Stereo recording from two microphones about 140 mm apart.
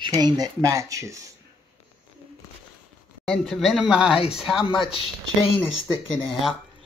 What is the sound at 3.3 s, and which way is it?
Speech, centre (ahead or behind).